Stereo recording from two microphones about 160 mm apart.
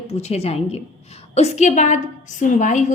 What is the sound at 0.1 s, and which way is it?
A woman's voice, 40° left (ahead or behind).